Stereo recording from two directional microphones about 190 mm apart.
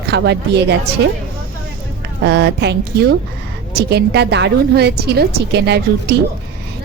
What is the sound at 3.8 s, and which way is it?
A woman's voice, 60° right (ahead or behind).